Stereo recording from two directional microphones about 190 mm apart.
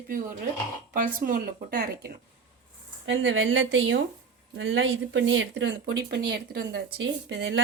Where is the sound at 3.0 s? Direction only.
75° right (ahead or behind).